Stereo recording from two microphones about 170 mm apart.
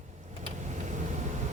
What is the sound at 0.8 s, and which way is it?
Vehicle, 45° right (ahead or behind).